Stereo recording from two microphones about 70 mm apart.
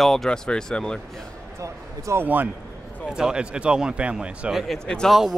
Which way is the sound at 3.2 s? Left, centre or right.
Centre.